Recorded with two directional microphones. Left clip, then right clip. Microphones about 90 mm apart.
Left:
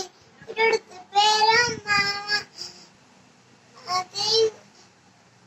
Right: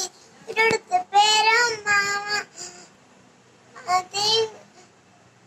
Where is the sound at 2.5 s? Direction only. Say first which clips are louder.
Left 1 dB; 25° left (ahead or behind).